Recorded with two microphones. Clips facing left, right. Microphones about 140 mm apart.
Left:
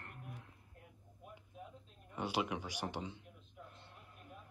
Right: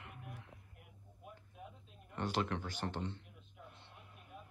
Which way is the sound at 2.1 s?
10° left (ahead or behind).